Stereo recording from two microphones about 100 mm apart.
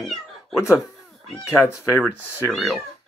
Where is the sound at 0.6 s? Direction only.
30° left (ahead or behind).